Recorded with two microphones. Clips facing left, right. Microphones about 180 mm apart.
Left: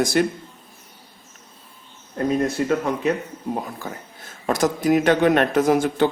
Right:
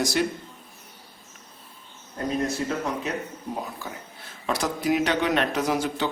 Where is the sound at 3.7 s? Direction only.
45° left (ahead or behind).